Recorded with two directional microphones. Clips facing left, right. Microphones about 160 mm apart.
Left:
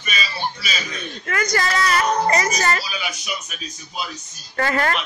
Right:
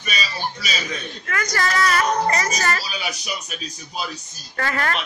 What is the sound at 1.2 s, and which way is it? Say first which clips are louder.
A woman's voice: left 3 dB; 25° left (ahead or behind).